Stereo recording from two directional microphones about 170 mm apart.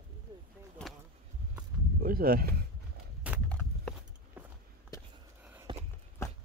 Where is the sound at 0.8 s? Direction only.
5° left (ahead or behind).